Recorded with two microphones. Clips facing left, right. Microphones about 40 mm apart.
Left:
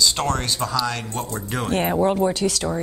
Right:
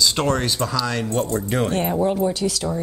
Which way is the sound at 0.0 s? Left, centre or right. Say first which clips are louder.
Right 2 dB; centre.